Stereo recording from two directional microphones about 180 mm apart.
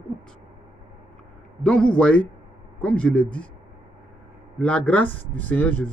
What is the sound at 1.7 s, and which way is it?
A man's voice, 5° left (ahead or behind).